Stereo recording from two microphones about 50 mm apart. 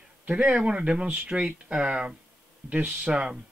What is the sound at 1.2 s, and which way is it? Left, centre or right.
Speech, centre.